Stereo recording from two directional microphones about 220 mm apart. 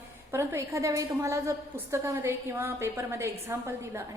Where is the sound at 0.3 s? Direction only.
10° right (ahead or behind).